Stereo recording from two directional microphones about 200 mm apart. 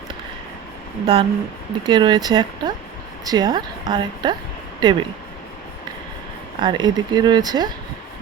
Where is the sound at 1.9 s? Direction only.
20° right (ahead or behind).